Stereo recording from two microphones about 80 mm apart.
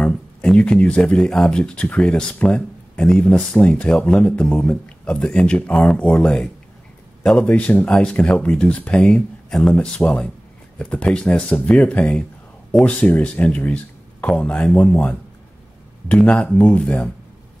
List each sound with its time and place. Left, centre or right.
0.0 s speech: centre